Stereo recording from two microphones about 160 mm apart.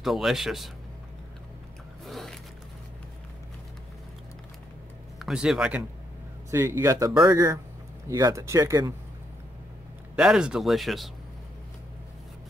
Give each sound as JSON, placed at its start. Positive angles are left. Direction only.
{"t": 0.0, "sound": "speech", "side_deg": 0}
{"t": 2.0, "sound": "a sound", "side_deg": 0}
{"t": 5.2, "sound": "speech", "side_deg": -5}
{"t": 10.1, "sound": "speech", "side_deg": -5}